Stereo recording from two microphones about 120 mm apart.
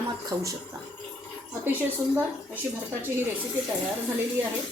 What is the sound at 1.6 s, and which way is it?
Speech, 15° right (ahead or behind).